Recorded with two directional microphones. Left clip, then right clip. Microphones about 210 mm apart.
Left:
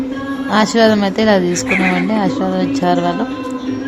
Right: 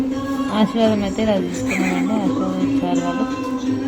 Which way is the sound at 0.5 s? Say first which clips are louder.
Left 7 dB; 25° left (ahead or behind).